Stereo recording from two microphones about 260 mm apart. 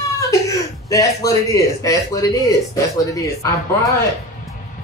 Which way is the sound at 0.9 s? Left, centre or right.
Centre.